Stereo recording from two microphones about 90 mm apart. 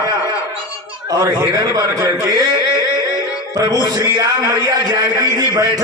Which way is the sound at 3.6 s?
45° right (ahead or behind).